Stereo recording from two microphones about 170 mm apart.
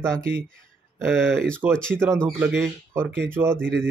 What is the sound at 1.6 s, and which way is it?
Speech, 10° right (ahead or behind).